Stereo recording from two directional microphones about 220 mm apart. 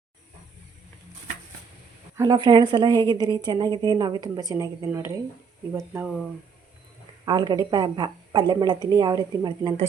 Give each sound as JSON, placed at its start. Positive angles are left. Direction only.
{"t": 2.1, "sound": "a woman's voice", "side_deg": -15}
{"t": 7.3, "sound": "speech", "side_deg": -20}